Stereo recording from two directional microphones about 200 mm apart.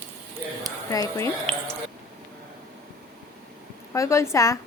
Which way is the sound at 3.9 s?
15° left (ahead or behind).